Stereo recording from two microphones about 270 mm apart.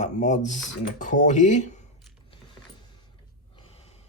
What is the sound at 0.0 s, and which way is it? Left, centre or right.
Speech, left.